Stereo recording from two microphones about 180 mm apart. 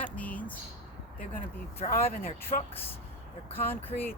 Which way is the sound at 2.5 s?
45° left (ahead or behind).